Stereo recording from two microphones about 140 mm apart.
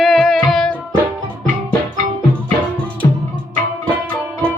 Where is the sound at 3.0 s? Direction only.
20° left (ahead or behind).